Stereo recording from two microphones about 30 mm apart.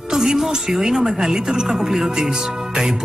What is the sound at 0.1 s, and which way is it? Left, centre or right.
Music, centre.